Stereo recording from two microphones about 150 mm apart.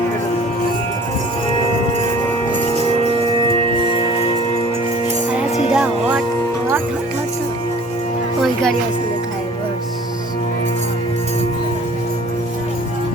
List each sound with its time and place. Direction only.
3.8 s music: 35° left (ahead or behind)
5.7 s music: 5° right (ahead or behind)